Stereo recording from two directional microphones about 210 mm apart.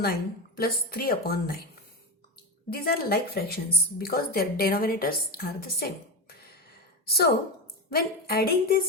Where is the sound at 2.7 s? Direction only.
45° left (ahead or behind).